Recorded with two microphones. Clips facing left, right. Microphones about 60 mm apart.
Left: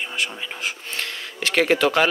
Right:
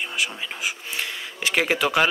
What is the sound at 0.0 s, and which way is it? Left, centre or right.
Speech, centre.